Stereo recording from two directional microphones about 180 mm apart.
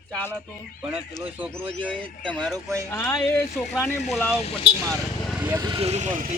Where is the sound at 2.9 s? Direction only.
15° left (ahead or behind).